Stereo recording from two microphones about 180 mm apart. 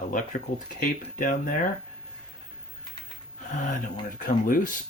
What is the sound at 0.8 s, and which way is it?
Speech, 45° left (ahead or behind).